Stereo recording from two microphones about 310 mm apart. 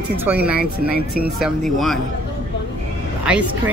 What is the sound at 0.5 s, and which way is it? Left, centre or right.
Speech, right.